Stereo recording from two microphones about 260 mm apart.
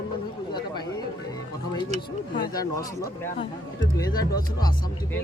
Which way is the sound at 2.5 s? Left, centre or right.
Centre.